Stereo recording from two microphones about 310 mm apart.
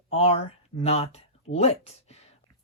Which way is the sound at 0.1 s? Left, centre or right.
Centre.